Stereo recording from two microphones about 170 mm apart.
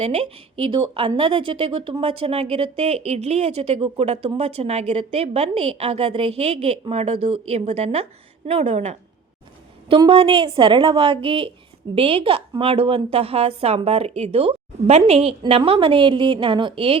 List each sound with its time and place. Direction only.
0.0 s speech: 40° right (ahead or behind)
9.9 s speech: 30° right (ahead or behind)